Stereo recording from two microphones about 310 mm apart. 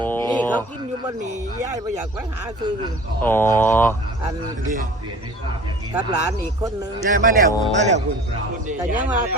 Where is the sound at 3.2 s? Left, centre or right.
Centre.